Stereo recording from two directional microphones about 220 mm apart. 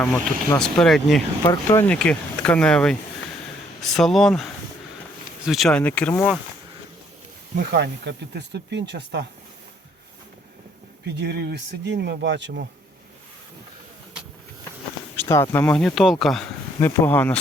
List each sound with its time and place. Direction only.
0.6 s speech: centre (ahead or behind)
5.5 s speech: centre (ahead or behind)
7.5 s speech: 50° right (ahead or behind)
11.0 s speech: 50° right (ahead or behind)
15.1 s speech: 10° left (ahead or behind)